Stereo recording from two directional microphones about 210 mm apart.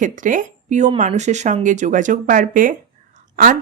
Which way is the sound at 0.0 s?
40° right (ahead or behind).